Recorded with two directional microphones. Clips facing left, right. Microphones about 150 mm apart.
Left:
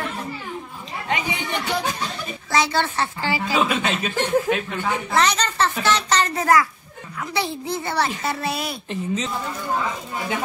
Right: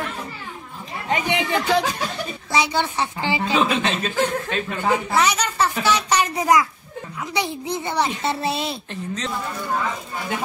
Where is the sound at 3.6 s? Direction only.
5° left (ahead or behind).